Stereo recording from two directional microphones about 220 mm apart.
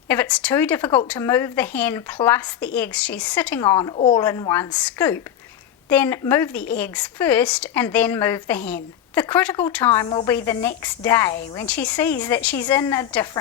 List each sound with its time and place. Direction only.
0.1 s a woman's voice: 5° left (ahead or behind)